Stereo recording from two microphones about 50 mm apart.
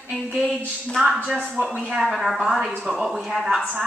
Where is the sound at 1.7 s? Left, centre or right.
Right.